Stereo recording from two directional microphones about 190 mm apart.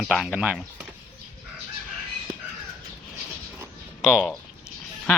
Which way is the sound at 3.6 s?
5° right (ahead or behind).